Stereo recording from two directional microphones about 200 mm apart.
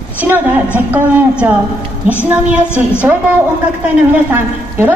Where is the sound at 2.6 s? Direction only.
10° left (ahead or behind).